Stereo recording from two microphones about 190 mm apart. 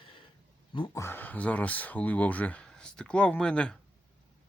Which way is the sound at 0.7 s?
25° left (ahead or behind).